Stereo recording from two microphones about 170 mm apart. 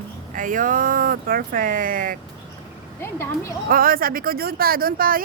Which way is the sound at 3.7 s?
60° right (ahead or behind).